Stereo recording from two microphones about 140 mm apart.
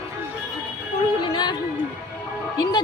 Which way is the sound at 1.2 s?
35° left (ahead or behind).